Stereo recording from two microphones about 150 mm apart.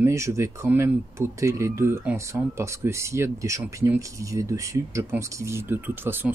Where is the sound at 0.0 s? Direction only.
20° right (ahead or behind).